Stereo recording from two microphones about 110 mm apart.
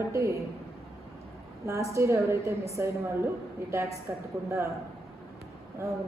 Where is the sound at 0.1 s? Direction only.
25° right (ahead or behind).